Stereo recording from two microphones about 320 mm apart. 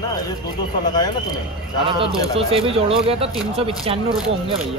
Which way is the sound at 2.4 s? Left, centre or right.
Centre.